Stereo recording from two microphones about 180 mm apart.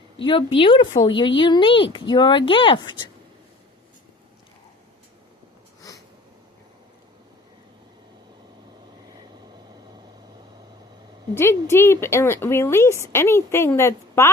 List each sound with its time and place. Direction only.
0.3 s speech: 30° left (ahead or behind)
11.3 s a woman's voice: 15° left (ahead or behind)